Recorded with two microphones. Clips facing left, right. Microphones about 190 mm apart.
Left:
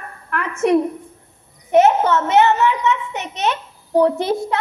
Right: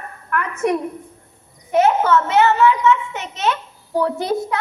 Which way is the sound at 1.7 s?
20° left (ahead or behind).